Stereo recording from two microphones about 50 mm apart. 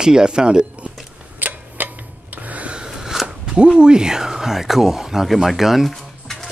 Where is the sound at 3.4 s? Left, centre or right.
Centre.